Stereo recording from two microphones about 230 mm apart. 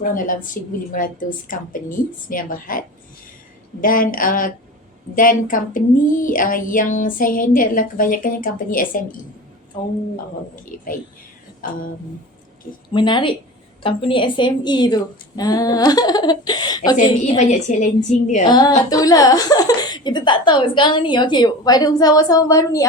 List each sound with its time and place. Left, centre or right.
0.0 s speech: left
11.6 s speech: left
12.9 s a woman's voice: left
17.0 s speech: left
18.9 s a woman's voice: centre